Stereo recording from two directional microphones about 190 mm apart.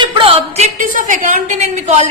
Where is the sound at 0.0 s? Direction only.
30° right (ahead or behind).